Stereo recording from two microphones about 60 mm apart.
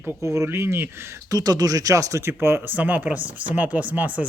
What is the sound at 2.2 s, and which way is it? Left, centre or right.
Speech, right.